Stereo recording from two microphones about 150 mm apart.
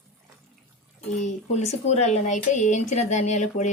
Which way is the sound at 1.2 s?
50° left (ahead or behind).